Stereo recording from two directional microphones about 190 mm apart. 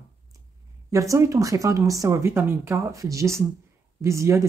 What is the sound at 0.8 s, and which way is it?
Speech, 15° right (ahead or behind).